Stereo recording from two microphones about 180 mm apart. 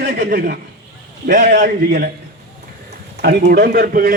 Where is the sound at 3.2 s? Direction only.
65° right (ahead or behind).